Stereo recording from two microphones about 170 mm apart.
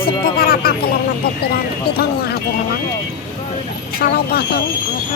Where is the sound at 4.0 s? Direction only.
65° left (ahead or behind).